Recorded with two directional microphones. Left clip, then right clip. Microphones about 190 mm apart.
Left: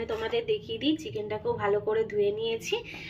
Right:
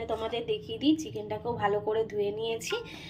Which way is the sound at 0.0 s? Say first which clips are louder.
Left 2 dB; 10° right (ahead or behind).